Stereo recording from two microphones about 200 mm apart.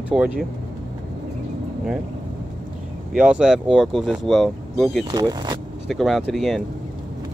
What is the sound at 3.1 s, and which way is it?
Speech, 5° right (ahead or behind).